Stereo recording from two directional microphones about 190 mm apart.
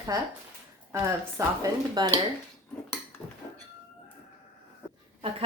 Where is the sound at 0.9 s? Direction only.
15° right (ahead or behind).